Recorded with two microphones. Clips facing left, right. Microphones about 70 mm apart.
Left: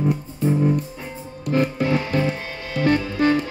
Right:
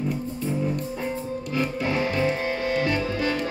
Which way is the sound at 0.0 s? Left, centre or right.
Left.